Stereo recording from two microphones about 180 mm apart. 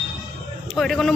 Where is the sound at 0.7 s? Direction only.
Centre (ahead or behind).